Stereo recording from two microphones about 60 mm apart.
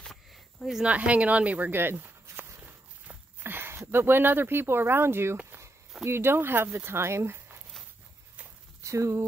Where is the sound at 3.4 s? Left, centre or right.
Right.